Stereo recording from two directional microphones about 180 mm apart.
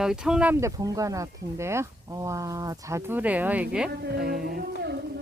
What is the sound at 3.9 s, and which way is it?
Speech, 65° right (ahead or behind).